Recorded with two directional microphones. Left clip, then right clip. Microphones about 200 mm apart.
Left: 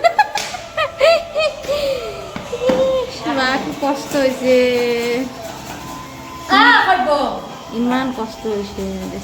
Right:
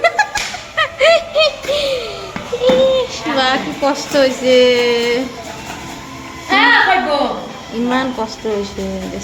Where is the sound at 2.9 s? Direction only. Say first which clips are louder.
Right 3 dB; 10° left (ahead or behind).